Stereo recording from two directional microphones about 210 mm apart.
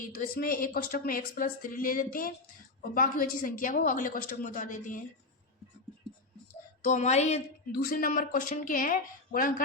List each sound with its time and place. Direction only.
0.1 s speech: 40° left (ahead or behind)
6.8 s speech: 35° left (ahead or behind)
7.7 s speech: 45° left (ahead or behind)